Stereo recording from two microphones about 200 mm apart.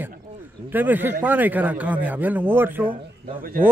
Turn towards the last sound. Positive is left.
turn(degrees=-45)  # may be behind; listen again after turning